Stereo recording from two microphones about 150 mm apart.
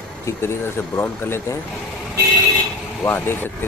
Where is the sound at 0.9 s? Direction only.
15° left (ahead or behind).